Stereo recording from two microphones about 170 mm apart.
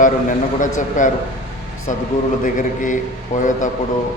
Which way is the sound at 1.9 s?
45° left (ahead or behind).